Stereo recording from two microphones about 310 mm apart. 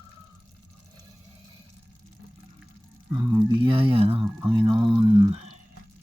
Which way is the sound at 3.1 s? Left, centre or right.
Centre.